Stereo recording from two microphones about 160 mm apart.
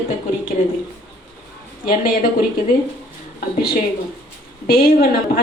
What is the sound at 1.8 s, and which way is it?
Speech, 60° left (ahead or behind).